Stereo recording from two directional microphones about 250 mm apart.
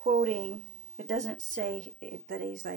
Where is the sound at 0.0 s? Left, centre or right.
Right.